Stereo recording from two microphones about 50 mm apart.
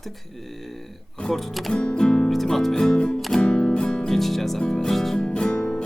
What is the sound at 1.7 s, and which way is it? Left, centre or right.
Music, centre.